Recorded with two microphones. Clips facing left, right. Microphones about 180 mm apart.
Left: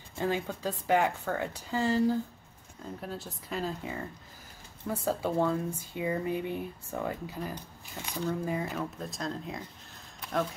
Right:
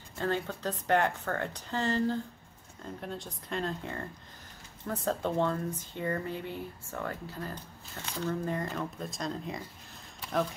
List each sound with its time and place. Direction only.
0.2 s speech: 10° left (ahead or behind)